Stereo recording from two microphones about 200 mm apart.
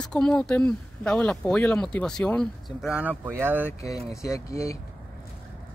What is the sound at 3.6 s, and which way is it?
Speech, 15° left (ahead or behind).